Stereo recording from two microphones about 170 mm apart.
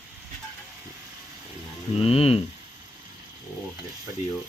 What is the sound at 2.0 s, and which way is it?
Speech, 35° left (ahead or behind).